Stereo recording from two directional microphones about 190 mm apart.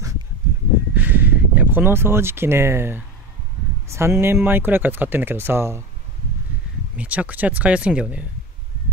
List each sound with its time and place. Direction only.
0.9 s a sound: 10° right (ahead or behind)
3.9 s speech: 15° right (ahead or behind)
7.0 s speech: 5° right (ahead or behind)